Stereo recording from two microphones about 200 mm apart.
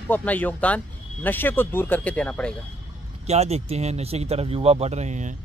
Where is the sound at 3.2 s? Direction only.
30° right (ahead or behind).